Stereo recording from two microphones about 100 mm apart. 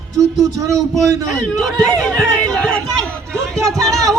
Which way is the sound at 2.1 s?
5° left (ahead or behind).